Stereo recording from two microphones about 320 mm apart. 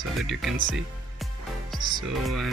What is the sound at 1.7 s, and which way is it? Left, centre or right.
Music, centre.